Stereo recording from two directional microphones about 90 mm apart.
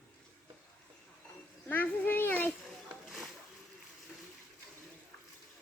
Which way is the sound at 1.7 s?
20° left (ahead or behind).